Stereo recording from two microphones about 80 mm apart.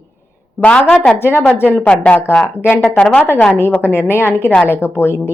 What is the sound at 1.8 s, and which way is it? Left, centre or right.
Speech, centre.